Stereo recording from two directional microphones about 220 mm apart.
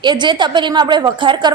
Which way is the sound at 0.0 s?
20° right (ahead or behind).